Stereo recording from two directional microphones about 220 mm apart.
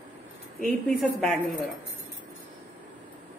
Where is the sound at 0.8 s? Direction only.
Centre (ahead or behind).